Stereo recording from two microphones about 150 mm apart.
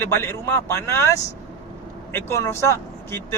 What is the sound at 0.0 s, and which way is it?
Speech, 15° left (ahead or behind).